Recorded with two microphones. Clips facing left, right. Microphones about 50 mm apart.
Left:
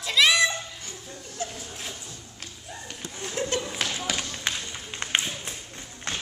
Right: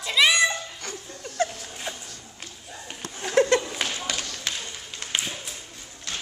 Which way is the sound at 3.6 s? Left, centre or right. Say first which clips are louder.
Even; centre.